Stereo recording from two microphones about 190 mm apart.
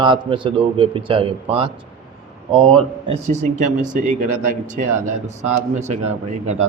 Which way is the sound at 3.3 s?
40° right (ahead or behind).